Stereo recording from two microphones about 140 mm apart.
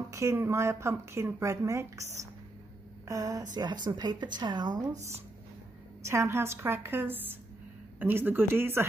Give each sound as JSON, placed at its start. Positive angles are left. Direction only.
{"t": 0.1, "sound": "speech", "side_deg": -20}
{"t": 3.1, "sound": "a woman's voice", "side_deg": -25}
{"t": 6.0, "sound": "a woman's voice", "side_deg": -20}